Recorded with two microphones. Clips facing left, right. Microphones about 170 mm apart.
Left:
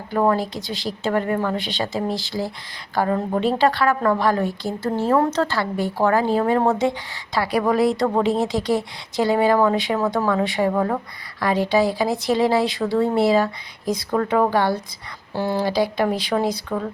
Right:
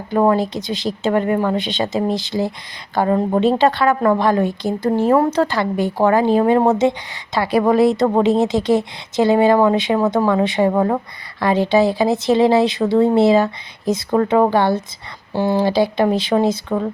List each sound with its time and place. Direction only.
0.1 s speech: 20° right (ahead or behind)